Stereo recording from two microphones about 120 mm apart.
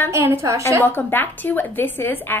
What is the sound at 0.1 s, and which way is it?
Speech, 20° right (ahead or behind).